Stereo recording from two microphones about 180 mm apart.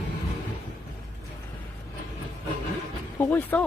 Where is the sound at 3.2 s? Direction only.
10° left (ahead or behind).